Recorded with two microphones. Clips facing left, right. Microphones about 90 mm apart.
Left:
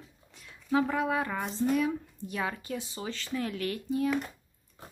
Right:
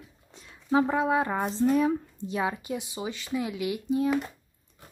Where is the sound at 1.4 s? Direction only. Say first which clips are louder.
Right 3 dB; 40° right (ahead or behind).